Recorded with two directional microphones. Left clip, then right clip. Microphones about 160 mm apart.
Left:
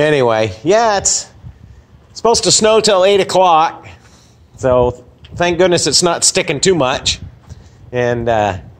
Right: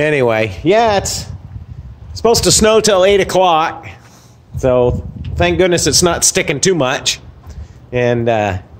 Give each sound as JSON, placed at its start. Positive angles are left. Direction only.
{"t": 0.0, "sound": "speech", "side_deg": -15}